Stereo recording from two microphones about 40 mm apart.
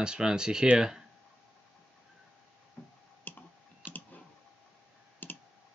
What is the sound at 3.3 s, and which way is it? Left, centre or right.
Clicking, left.